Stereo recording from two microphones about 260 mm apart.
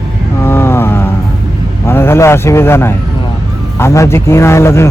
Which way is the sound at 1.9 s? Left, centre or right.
Centre.